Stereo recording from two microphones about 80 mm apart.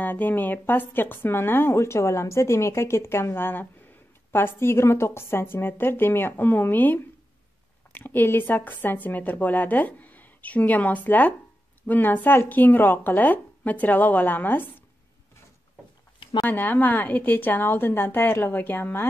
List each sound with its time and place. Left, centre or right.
0.0 s speech: left
16.4 s speech: left